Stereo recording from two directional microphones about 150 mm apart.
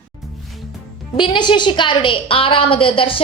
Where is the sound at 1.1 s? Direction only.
30° left (ahead or behind).